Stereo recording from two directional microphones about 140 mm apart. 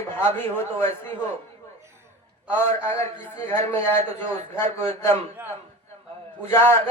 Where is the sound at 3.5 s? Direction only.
20° left (ahead or behind).